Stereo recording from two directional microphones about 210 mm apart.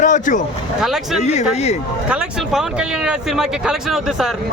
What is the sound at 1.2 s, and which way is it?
Speech, 30° left (ahead or behind).